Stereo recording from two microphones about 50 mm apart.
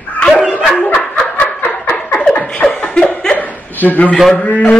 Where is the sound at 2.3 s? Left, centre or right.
Left.